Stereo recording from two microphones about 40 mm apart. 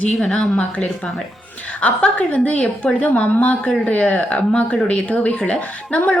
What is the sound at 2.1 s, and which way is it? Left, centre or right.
A woman's voice, left.